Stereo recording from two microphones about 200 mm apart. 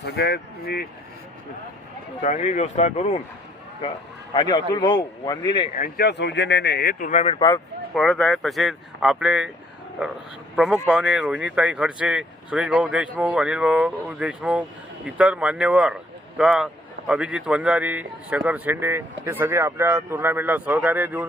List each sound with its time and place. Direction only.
0.0 s speech: 55° left (ahead or behind)
2.2 s speech: 35° left (ahead or behind)
4.4 s a man's voice: 20° left (ahead or behind)
5.7 s speech: 45° left (ahead or behind)
7.3 s a man's voice: 20° left (ahead or behind)
7.9 s speech: 5° left (ahead or behind)
10.5 s a man's voice: 5° right (ahead or behind)